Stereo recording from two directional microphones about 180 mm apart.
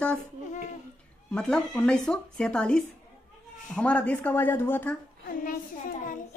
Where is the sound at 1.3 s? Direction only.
5° left (ahead or behind).